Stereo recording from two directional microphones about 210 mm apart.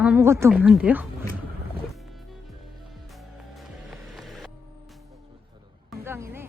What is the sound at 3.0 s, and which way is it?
Music, centre (ahead or behind).